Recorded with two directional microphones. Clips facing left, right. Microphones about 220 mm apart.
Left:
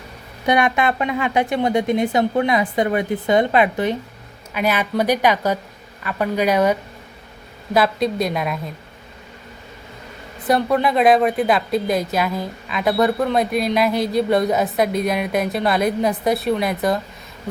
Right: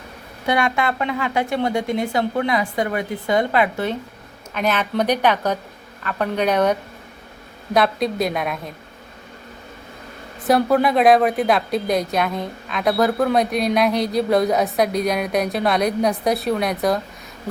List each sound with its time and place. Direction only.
0.4 s a woman's voice: 20° left (ahead or behind); by 8.7 s centre (ahead or behind)
10.4 s speech: centre (ahead or behind)